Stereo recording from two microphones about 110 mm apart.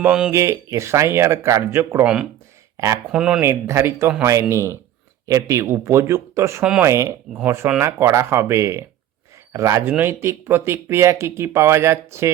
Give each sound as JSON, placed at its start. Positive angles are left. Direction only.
{"t": 0.0, "sound": "speech", "side_deg": -10}
{"t": 0.3, "sound": "speech", "side_deg": -25}
{"t": 3.1, "sound": "speech", "side_deg": -5}
{"t": 3.4, "sound": "speech", "side_deg": -25}
{"t": 6.6, "sound": "speech", "side_deg": -10}
{"t": 6.8, "sound": "speech", "side_deg": -25}